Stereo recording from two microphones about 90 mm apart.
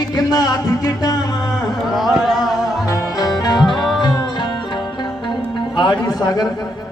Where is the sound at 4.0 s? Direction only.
60° left (ahead or behind).